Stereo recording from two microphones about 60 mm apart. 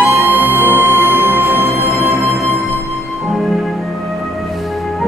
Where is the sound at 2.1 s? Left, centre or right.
Centre.